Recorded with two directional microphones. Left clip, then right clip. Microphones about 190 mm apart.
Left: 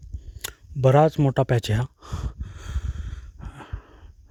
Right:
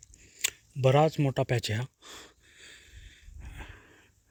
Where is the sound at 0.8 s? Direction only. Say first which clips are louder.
Left 6 dB; 45° left (ahead or behind).